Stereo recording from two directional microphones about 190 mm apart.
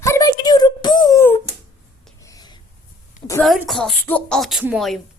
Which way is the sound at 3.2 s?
30° left (ahead or behind).